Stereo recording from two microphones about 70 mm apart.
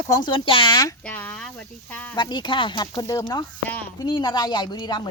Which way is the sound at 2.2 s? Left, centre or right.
Left.